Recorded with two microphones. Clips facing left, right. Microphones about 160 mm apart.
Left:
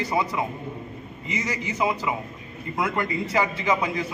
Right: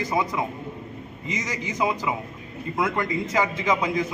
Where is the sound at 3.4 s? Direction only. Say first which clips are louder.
Right 1 dB; 15° right (ahead or behind).